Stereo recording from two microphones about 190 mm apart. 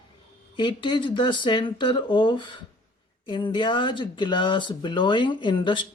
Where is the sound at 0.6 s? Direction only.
25° left (ahead or behind).